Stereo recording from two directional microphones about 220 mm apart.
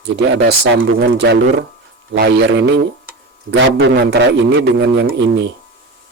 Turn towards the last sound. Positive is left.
turn(degrees=-50)  # may be behind; listen again after turning